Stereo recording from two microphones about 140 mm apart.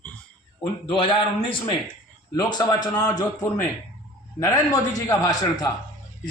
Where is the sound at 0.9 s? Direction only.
40° left (ahead or behind).